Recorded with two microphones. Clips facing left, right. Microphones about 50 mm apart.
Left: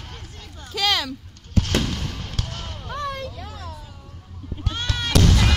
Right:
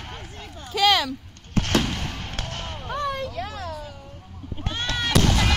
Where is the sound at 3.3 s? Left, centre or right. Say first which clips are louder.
Right 5 dB; right.